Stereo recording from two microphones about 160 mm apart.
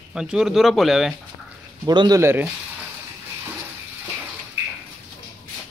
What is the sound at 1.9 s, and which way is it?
Speech, 25° right (ahead or behind).